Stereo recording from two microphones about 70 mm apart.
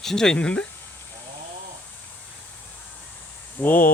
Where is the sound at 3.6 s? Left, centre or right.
Left.